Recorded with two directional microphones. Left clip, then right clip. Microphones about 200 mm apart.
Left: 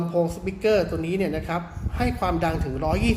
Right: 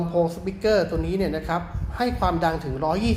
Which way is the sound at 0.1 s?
10° left (ahead or behind).